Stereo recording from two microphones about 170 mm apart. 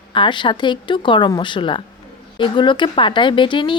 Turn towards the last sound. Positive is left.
turn(degrees=30)  # may be behind; listen again after turning